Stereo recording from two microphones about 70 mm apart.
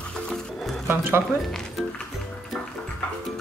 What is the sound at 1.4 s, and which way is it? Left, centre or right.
Speech, centre.